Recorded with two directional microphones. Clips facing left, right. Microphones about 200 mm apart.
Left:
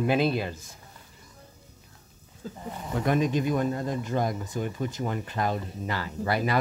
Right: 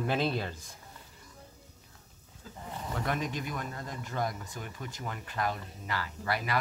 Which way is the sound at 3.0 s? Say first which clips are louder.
Left 11 dB; 20° left (ahead or behind).